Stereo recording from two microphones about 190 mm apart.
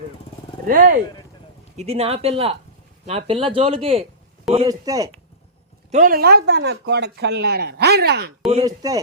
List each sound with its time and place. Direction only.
0.7 s speech: 50° right (ahead or behind)
1.7 s speech: 35° right (ahead or behind); by 5.1 s 20° right (ahead or behind)
5.9 s speech: 45° right (ahead or behind)
8.6 s speech: 20° right (ahead or behind)